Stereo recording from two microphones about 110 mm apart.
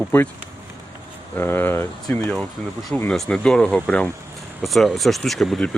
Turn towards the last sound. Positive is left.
turn(degrees=5)  # may be behind; listen again after turning